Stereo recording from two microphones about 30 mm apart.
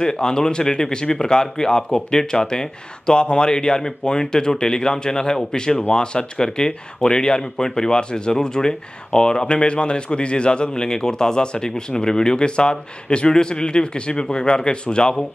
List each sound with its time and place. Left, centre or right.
0.0 s a man's voice: left